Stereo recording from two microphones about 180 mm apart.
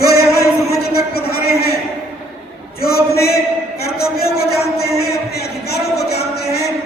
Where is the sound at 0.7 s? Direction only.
60° left (ahead or behind).